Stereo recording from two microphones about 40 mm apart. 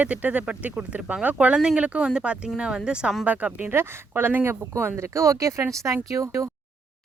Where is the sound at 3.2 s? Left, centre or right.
Right.